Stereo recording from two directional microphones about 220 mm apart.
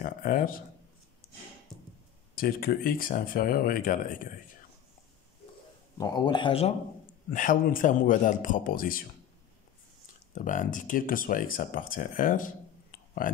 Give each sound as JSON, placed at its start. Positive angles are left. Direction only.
{"t": 0.0, "sound": "a sound", "side_deg": 40}
{"t": 2.3, "sound": "speech", "side_deg": 40}
{"t": 5.9, "sound": "a man's voice", "side_deg": 20}
{"t": 7.2, "sound": "speech", "side_deg": 40}
{"t": 10.3, "sound": "speech", "side_deg": 35}